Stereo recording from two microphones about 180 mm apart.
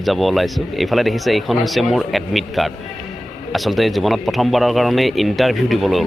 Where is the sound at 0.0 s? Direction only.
Centre (ahead or behind).